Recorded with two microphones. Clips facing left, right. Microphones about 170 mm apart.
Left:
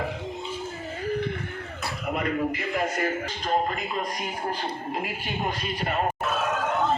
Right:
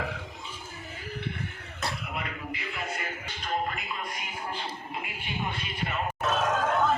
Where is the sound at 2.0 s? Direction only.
45° left (ahead or behind).